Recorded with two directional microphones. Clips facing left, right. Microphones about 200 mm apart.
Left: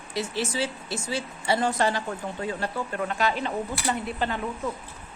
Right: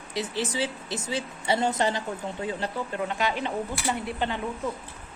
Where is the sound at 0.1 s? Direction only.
20° right (ahead or behind).